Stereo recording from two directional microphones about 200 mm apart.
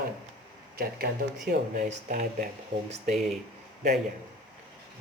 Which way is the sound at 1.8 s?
45° right (ahead or behind).